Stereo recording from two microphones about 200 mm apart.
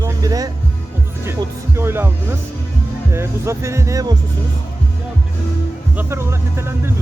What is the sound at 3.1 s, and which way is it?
Speech, 15° right (ahead or behind).